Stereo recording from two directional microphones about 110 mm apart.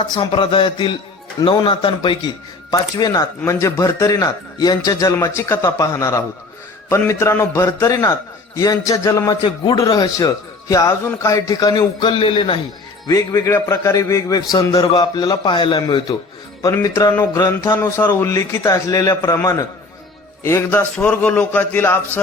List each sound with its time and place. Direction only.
0.0 s a man's voice: 40° left (ahead or behind)
13.1 s a man's voice: 30° left (ahead or behind)
16.7 s a man's voice: 25° left (ahead or behind)